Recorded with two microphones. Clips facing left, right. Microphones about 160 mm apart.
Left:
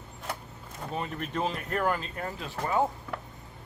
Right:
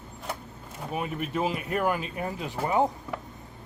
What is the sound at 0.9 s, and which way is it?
Speech, 10° right (ahead or behind).